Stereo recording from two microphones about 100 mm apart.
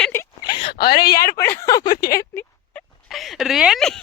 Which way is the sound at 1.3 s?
25° left (ahead or behind).